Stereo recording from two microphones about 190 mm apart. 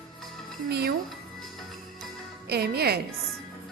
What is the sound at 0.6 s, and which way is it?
Speech, 60° right (ahead or behind).